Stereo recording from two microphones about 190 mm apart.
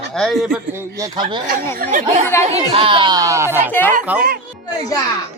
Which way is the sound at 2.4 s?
30° right (ahead or behind).